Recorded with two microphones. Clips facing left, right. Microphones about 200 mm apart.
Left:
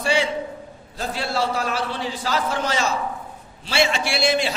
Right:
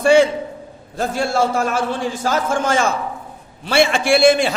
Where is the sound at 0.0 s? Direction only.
50° right (ahead or behind).